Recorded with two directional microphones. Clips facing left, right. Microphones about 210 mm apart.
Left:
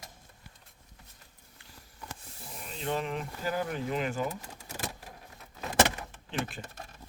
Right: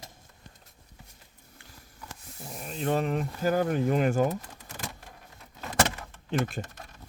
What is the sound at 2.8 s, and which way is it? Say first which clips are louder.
Speech: right 5 dB; 45° right (ahead or behind).